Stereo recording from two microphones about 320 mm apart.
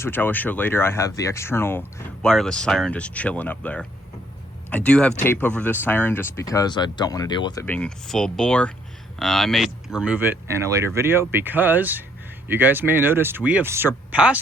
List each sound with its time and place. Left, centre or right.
0.0 s speech: centre